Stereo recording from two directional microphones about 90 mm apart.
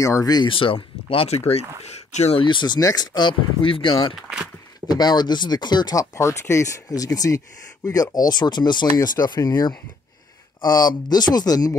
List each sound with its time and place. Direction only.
0.0 s speech: 40° left (ahead or behind)
0.5 s speech: 70° left (ahead or behind); by 1.3 s 90° left
2.3 s speech: 65° left (ahead or behind); by 4.1 s 80° left
4.1 s speech: 5° right (ahead or behind)
4.8 s speech: 50° left (ahead or behind)
5.9 s speech: 35° left (ahead or behind); by 9.4 s 50° left (ahead or behind)
10.6 s speech: 50° left (ahead or behind)